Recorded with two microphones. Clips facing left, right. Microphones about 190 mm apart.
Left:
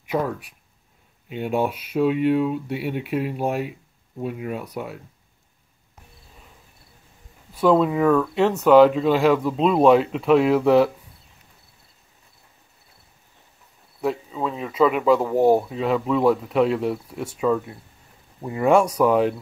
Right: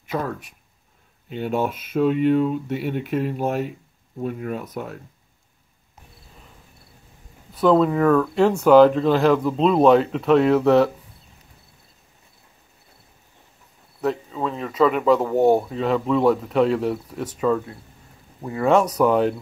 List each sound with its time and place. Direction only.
0.0 s speech: 10° left (ahead or behind)
1.7 s speech: 50° right (ahead or behind)
2.0 s speech: 5° left (ahead or behind)
7.5 s speech: 5° left (ahead or behind)
14.0 s speech: 5° left (ahead or behind)
18.9 s speech: 5° left (ahead or behind)